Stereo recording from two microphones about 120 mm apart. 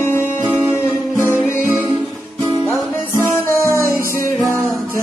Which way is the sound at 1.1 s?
20° right (ahead or behind).